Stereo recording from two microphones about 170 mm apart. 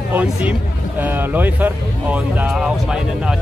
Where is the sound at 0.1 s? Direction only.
10° right (ahead or behind).